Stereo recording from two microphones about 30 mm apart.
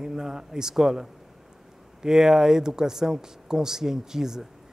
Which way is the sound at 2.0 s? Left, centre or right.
Centre.